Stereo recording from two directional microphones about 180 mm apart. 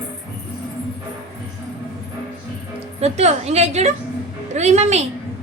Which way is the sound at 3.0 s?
35° right (ahead or behind).